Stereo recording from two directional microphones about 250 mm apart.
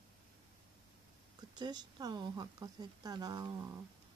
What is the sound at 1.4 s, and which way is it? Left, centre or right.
Speech, centre.